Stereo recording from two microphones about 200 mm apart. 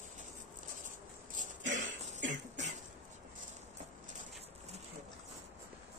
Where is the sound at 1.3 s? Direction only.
40° right (ahead or behind).